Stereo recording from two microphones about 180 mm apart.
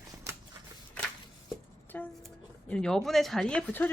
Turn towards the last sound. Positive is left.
turn(degrees=10)  # may be behind; listen again after turning